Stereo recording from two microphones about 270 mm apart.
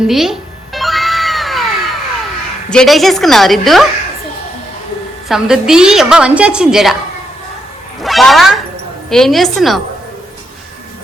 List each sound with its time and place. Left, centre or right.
0.1 s cat: centre
2.6 s a woman's voice: centre
5.3 s a woman's voice: centre
8.0 s a woman's voice: centre